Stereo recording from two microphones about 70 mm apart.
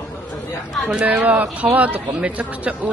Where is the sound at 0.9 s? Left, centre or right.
Right.